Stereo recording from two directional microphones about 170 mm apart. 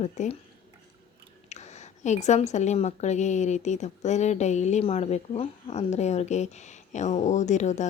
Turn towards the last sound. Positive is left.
turn(degrees=45)  # may be behind; listen again after turning